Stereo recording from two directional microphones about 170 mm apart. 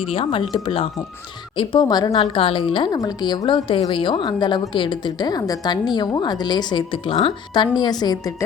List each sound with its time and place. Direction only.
0.0 s speech: 35° left (ahead or behind)